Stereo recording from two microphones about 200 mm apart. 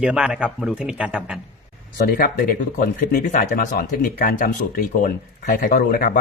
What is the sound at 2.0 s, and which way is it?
Speech, 50° left (ahead or behind).